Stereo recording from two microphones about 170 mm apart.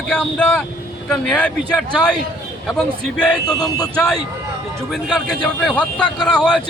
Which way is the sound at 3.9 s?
5° left (ahead or behind).